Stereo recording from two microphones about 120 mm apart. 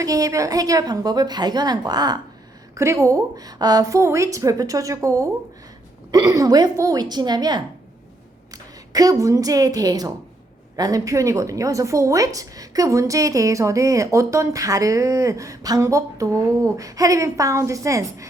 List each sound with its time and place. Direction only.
0.0 s a woman's voice: 30° right (ahead or behind)
8.9 s a woman's voice: 30° right (ahead or behind)